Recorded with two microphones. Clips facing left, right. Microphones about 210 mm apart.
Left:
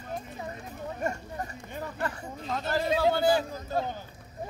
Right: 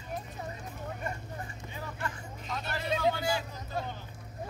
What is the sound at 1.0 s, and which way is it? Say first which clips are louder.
Speech: left 6 dB; 45° left (ahead or behind).